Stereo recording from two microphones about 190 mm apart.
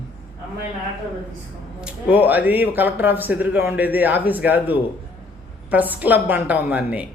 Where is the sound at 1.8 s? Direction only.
5° right (ahead or behind).